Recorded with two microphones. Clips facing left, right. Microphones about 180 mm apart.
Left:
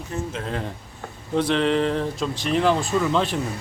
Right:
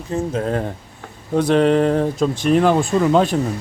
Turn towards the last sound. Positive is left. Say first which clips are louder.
# right 6 dB
turn(degrees=-45)  # may be behind; listen again after turning